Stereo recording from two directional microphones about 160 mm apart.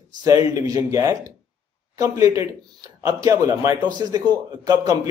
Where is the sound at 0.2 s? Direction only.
20° right (ahead or behind).